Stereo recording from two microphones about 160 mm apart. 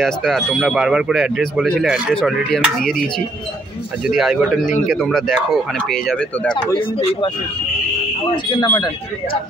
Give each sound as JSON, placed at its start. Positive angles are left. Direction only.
{"t": 0.0, "sound": "speech", "side_deg": 0}
{"t": 4.1, "sound": "speech", "side_deg": 0}
{"t": 6.8, "sound": "speech", "side_deg": 35}
{"t": 8.5, "sound": "speech", "side_deg": 25}